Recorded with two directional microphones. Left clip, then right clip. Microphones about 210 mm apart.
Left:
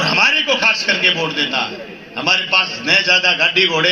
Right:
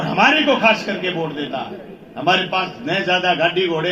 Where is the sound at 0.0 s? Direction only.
40° right (ahead or behind).